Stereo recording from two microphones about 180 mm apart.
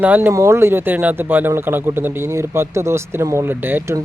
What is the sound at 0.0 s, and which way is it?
Speech, 10° right (ahead or behind).